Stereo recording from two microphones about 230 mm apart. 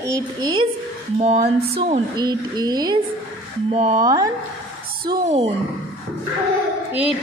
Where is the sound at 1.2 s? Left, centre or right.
Right.